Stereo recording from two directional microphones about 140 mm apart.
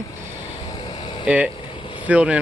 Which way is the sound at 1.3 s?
10° right (ahead or behind).